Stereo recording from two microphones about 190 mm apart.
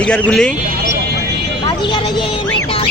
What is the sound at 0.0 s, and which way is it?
Speech, 5° left (ahead or behind).